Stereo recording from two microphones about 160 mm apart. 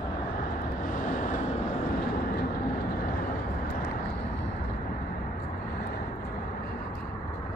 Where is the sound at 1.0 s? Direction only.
55° left (ahead or behind).